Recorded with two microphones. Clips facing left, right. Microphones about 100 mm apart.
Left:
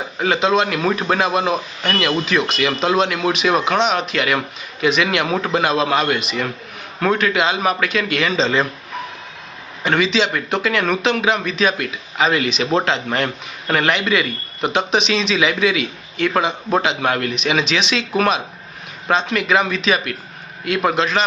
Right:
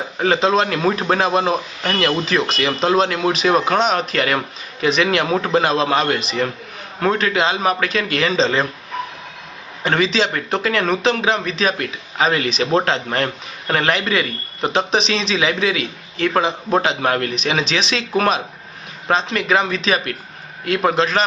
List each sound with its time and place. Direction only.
0.2 s speech: 35° right (ahead or behind)
9.8 s speech: 35° right (ahead or behind)